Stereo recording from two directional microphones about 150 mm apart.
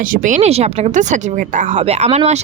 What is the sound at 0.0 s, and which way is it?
Speech, 60° right (ahead or behind).